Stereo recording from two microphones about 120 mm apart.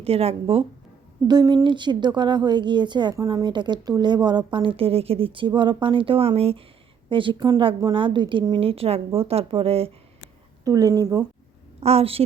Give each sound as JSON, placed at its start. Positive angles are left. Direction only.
{"t": 0.0, "sound": "speech", "side_deg": -55}
{"t": 1.3, "sound": "a woman's voice", "side_deg": -35}
{"t": 7.1, "sound": "a woman's voice", "side_deg": -45}
{"t": 10.6, "sound": "a woman's voice", "side_deg": -30}
{"t": 11.8, "sound": "speech", "side_deg": -60}